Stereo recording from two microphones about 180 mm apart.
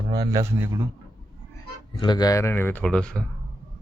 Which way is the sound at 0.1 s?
20° right (ahead or behind).